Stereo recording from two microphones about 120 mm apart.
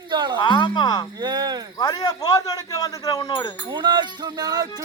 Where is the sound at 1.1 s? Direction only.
35° right (ahead or behind).